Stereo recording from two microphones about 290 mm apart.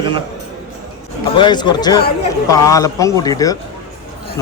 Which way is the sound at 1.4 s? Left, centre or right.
Centre.